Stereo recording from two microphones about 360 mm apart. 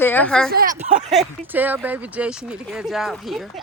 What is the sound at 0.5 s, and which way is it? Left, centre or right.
Speech, right.